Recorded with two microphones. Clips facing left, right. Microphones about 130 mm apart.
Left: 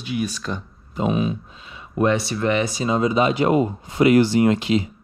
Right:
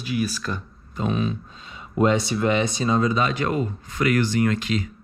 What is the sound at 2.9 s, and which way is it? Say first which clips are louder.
Speech: left 5 dB; 20° left (ahead or behind).